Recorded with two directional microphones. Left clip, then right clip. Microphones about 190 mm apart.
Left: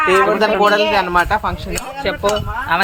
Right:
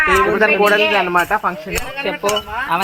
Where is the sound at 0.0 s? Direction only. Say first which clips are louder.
Left 1 dB; 60° left (ahead or behind).